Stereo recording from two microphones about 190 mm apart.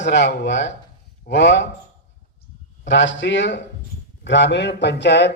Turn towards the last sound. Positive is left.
turn(degrees=65)  # may be behind; listen again after turning